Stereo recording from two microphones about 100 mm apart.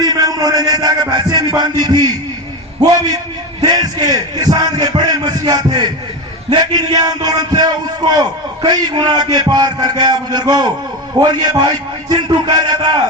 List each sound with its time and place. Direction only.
0.0 s music: 40° right (ahead or behind)
3.6 s speech: 40° right (ahead or behind)